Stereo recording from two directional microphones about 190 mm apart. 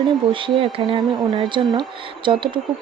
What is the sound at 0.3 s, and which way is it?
Speech, 25° right (ahead or behind).